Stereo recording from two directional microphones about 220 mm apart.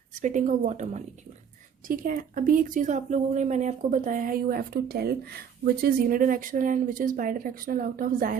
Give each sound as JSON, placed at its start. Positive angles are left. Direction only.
{"t": 0.1, "sound": "speech", "side_deg": -35}